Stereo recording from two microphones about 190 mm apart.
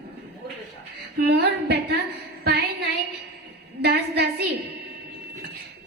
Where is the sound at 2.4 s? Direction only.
60° right (ahead or behind).